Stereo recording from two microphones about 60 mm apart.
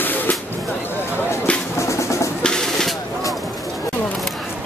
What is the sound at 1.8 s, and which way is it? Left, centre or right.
Music, left.